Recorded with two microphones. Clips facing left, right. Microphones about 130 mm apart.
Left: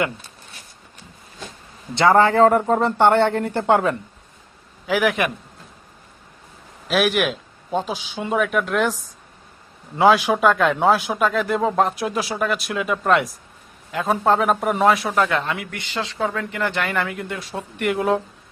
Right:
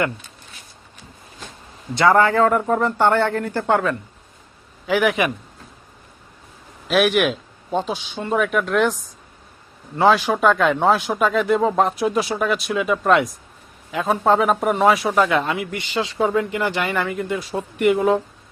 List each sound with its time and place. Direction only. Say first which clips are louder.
2.0 s speech: left 1 dB; 25° left (ahead or behind)
4.9 s a man's voice: right 1 dB; centre (ahead or behind)
6.8 s a man's voice: right 2 dB; centre (ahead or behind)
10.0 s a man's voice: left 1 dB; 10° left (ahead or behind)